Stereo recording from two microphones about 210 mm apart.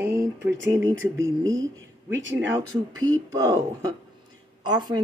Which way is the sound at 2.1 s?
60° right (ahead or behind).